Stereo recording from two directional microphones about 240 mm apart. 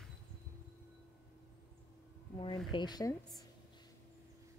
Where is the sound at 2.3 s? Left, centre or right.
Centre.